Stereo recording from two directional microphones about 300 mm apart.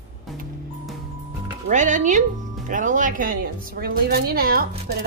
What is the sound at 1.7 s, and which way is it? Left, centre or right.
Speech, right.